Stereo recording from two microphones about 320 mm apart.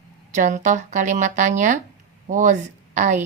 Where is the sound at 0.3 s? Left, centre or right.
Right.